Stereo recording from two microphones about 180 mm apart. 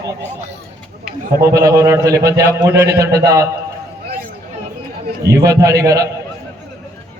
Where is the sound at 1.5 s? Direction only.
15° right (ahead or behind).